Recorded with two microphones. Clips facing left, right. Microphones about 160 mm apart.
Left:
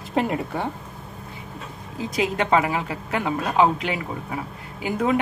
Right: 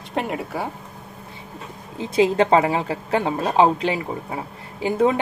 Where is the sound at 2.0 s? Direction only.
30° right (ahead or behind).